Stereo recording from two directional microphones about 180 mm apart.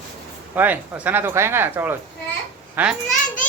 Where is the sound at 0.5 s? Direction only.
10° right (ahead or behind).